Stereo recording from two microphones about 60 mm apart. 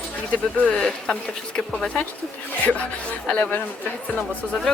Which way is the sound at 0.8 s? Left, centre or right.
Centre.